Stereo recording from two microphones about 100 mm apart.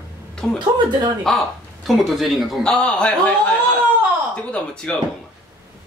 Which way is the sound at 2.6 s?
10° left (ahead or behind).